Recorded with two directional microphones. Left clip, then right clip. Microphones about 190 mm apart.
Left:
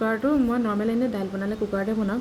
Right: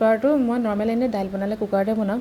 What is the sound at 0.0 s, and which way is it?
A woman's voice, 10° right (ahead or behind).